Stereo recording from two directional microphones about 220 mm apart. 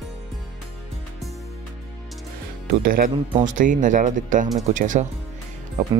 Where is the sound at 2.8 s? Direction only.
40° right (ahead or behind).